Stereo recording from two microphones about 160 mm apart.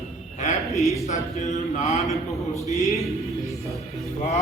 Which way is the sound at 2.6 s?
20° right (ahead or behind).